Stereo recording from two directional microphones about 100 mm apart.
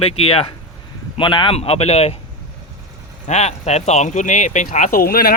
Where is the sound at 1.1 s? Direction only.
55° left (ahead or behind).